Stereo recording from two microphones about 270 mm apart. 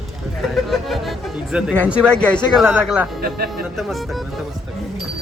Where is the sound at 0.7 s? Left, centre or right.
Centre.